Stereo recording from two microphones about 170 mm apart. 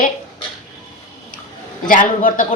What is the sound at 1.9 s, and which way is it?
Speech, 50° left (ahead or behind).